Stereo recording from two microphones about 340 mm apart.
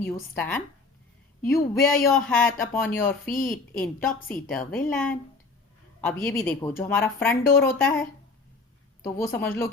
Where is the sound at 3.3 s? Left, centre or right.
Left.